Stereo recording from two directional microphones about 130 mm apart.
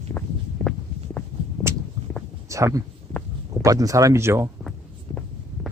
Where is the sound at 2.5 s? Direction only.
25° right (ahead or behind).